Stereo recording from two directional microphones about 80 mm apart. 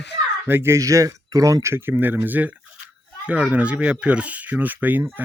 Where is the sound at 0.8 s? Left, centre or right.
Right.